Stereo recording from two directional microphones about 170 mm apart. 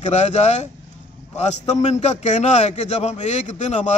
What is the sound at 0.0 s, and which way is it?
A man's voice, 40° left (ahead or behind).